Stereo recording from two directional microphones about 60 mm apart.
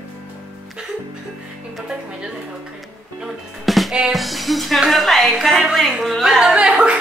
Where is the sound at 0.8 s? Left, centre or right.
Centre.